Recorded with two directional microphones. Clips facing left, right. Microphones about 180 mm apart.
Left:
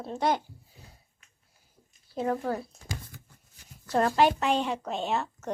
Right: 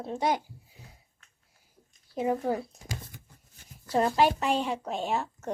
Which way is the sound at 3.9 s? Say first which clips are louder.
Left 1 dB; 5° right (ahead or behind).